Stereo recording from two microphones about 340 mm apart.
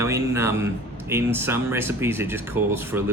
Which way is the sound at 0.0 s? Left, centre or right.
Centre.